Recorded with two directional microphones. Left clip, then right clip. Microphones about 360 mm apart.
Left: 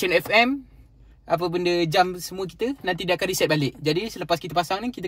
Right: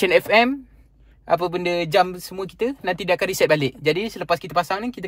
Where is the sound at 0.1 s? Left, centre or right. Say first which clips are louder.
Right 1 dB; centre.